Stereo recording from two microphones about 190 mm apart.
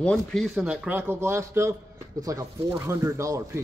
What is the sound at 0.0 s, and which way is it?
A man's voice, 5° left (ahead or behind).